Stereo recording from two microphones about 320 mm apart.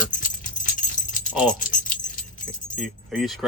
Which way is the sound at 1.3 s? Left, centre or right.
Centre.